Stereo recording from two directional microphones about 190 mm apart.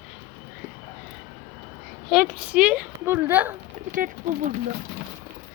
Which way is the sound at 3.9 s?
45° right (ahead or behind).